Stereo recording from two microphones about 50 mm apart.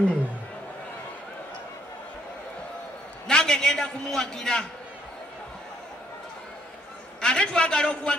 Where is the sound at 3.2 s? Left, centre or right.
Centre.